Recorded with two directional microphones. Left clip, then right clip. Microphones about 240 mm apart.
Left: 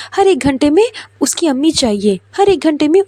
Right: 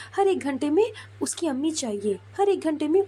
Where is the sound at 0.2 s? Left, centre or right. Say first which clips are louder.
Left 12 dB; left.